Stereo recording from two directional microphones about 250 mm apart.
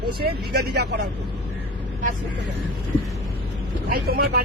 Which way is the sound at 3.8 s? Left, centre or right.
Right.